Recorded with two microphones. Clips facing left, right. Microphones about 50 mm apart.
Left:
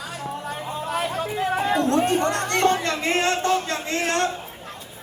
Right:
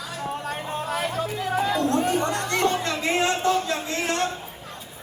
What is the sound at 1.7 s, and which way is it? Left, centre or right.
Music, left.